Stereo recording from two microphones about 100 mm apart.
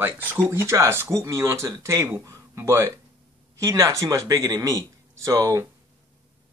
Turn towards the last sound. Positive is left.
turn(degrees=-30)  # may be behind; listen again after turning